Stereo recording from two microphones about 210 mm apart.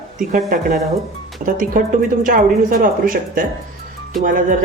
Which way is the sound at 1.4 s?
40° right (ahead or behind).